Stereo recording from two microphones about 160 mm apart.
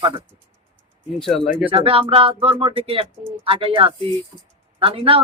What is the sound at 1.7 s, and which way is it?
Speech, 35° right (ahead or behind).